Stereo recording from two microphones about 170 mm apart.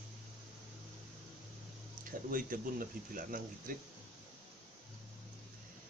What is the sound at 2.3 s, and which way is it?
Speech, 55° right (ahead or behind).